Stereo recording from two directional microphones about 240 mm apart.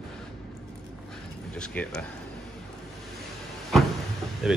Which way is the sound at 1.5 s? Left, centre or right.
Centre.